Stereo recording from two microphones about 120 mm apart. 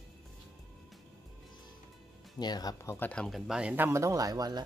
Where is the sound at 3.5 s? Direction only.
10° right (ahead or behind); by 4.6 s 30° right (ahead or behind).